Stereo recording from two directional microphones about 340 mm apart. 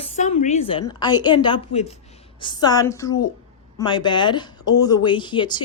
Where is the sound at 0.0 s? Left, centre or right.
Centre.